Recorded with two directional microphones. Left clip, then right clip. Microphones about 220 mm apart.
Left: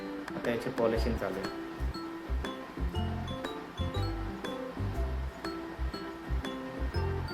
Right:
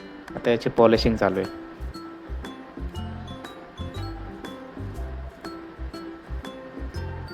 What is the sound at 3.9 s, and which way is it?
Music, centre (ahead or behind).